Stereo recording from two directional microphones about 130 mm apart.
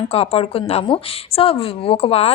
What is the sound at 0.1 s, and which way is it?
A woman's voice, 50° left (ahead or behind).